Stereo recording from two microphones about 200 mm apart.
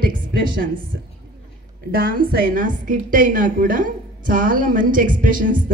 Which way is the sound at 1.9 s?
45° right (ahead or behind).